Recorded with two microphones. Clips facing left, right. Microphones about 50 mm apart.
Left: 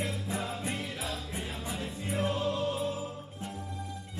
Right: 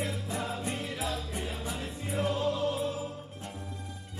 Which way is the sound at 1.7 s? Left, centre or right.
Right.